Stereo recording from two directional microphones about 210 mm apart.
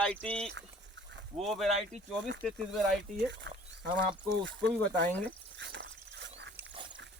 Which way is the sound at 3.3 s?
55° right (ahead or behind).